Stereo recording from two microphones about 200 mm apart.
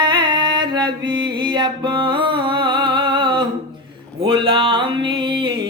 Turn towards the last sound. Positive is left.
turn(degrees=-25)  # may be behind; listen again after turning